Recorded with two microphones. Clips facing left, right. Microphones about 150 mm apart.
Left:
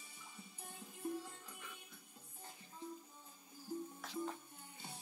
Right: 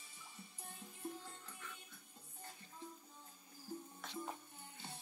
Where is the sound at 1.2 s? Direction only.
10° left (ahead or behind).